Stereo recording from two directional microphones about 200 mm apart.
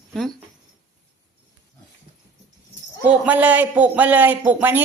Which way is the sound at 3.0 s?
5° right (ahead or behind).